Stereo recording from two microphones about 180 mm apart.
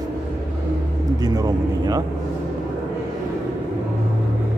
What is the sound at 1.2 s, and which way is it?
Speech, 20° right (ahead or behind).